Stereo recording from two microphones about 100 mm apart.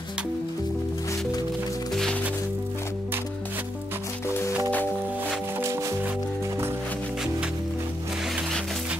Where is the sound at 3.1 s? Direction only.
20° right (ahead or behind).